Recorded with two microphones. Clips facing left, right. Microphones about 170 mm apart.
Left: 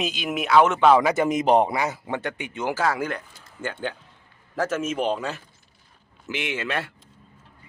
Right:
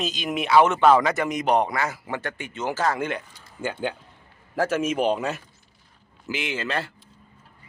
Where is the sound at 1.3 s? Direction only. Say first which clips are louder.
Left 3 dB; 25° left (ahead or behind); by 3.2 s centre (ahead or behind).